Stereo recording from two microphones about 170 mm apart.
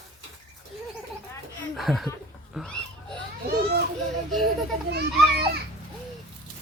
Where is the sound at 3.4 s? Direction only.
70° right (ahead or behind).